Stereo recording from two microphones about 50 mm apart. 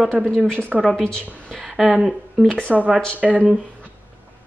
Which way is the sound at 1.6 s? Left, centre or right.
Centre.